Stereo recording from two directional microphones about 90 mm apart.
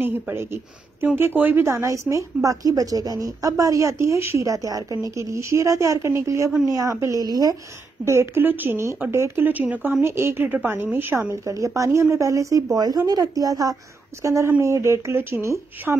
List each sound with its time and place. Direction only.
0.0 s a woman's voice: 25° right (ahead or behind); by 7.5 s 45° right (ahead or behind)
8.0 s a woman's voice: 30° right (ahead or behind)
9.5 s a woman's voice: 20° right (ahead or behind)
10.0 s a woman's voice: 30° right (ahead or behind)
11.1 s speech: 35° right (ahead or behind)
12.7 s speech: 45° right (ahead or behind); by 15.5 s 30° right (ahead or behind)